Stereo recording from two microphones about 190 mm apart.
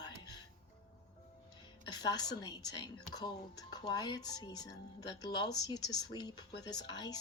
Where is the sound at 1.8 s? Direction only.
20° left (ahead or behind).